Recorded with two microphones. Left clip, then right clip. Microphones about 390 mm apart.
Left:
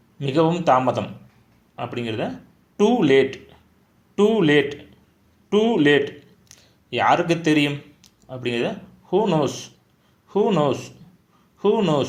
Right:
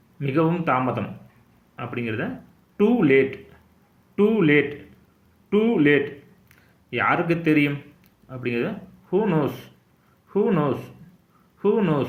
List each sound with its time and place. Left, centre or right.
0.2 s speech: centre